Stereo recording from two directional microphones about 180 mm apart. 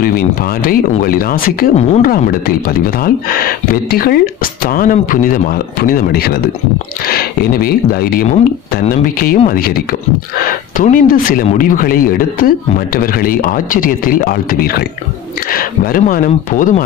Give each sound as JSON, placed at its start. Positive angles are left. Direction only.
{"t": 0.0, "sound": "speech", "side_deg": 55}
{"t": 1.8, "sound": "speech", "side_deg": 35}
{"t": 2.0, "sound": "speech", "side_deg": 55}